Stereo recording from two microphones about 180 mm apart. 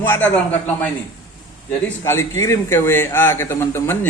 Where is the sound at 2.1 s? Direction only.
15° left (ahead or behind).